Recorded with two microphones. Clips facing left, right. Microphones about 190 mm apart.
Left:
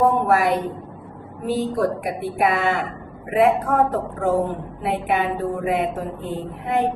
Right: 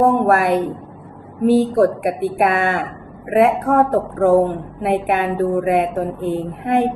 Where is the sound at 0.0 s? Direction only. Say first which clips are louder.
Right 3 dB; 50° right (ahead or behind).